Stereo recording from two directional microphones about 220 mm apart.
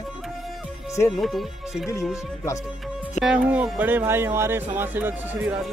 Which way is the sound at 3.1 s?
5° right (ahead or behind).